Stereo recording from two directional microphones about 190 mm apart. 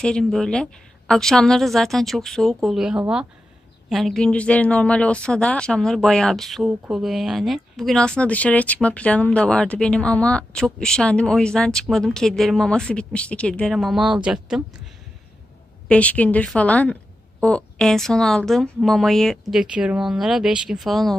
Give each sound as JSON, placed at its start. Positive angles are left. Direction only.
{"t": 0.0, "sound": "speech", "side_deg": 5}
{"t": 15.9, "sound": "speech", "side_deg": 5}